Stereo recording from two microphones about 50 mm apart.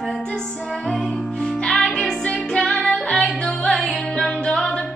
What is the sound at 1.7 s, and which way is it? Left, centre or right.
Music, centre.